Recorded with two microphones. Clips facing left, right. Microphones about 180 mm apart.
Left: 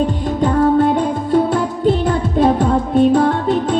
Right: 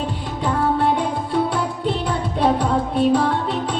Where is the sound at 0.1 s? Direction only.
45° left (ahead or behind).